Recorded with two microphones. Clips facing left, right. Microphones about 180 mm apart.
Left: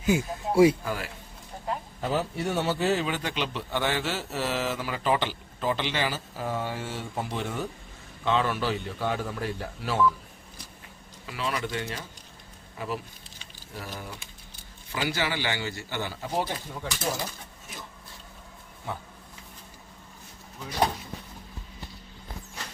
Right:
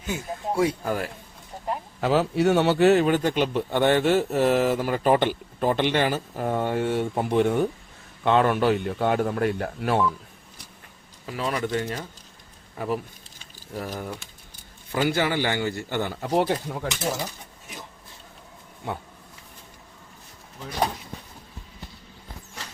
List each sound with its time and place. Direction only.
0.0 s speech: 10° left (ahead or behind)
0.9 s a man's voice: 50° right (ahead or behind)
2.0 s speech: 80° right; by 10.1 s 55° right (ahead or behind)
11.3 s a man's voice: 40° right (ahead or behind)
13.4 s a sound: 45° right (ahead or behind)
14.9 s a man's voice: 50° right (ahead or behind); by 16.9 s 70° right (ahead or behind)